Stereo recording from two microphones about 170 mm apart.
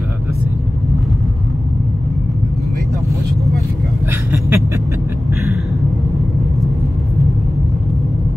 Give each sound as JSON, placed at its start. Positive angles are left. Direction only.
{"t": 4.1, "sound": "vehicle", "side_deg": -10}